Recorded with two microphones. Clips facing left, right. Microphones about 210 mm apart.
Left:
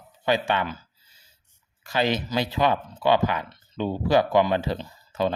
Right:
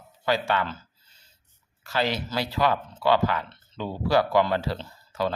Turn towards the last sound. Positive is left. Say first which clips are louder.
# left 2 dB
turn(degrees=20)  # may be behind; listen again after turning